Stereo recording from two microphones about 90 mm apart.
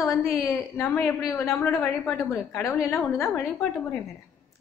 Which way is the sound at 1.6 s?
30° left (ahead or behind).